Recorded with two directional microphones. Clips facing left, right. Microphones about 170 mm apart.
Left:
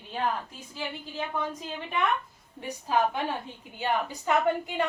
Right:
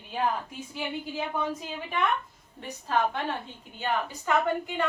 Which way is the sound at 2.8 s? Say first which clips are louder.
Left 1 dB; 10° left (ahead or behind).